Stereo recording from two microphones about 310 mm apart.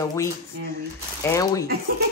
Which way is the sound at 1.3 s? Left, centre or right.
Centre.